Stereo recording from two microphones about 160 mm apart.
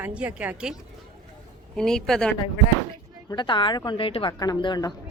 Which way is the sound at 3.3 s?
30° left (ahead or behind).